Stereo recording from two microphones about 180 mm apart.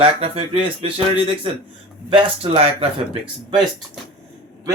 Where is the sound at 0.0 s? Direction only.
30° right (ahead or behind).